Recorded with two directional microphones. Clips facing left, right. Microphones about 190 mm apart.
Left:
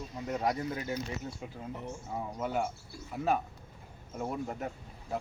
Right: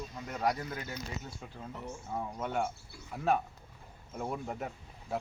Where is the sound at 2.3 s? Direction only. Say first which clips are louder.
Left 2 dB; 5° left (ahead or behind).